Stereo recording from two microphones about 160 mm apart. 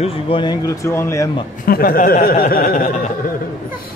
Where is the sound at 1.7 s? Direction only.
65° left (ahead or behind).